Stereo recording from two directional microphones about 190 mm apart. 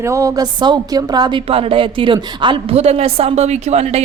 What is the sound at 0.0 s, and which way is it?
A woman's voice, 15° right (ahead or behind).